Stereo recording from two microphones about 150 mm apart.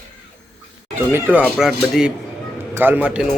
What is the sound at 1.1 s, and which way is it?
Speech, 15° right (ahead or behind).